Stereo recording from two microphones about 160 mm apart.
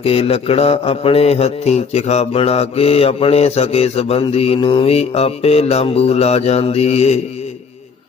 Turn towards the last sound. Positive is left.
turn(degrees=45)  # may be behind; listen again after turning